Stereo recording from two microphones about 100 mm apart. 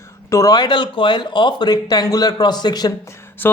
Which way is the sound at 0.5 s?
50° left (ahead or behind).